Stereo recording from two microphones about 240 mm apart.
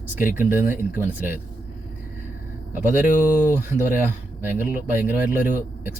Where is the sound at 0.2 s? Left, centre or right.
Left.